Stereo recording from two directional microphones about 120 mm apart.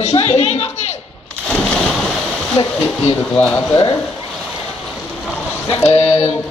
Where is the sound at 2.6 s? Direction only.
55° left (ahead or behind).